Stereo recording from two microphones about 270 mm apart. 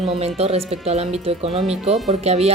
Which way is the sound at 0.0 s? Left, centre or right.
Right.